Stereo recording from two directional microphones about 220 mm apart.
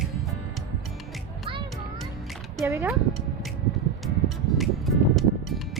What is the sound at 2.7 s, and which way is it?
Speech, 10° right (ahead or behind).